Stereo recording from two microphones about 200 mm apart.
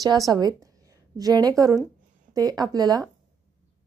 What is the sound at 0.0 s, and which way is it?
A woman's voice, 20° right (ahead or behind).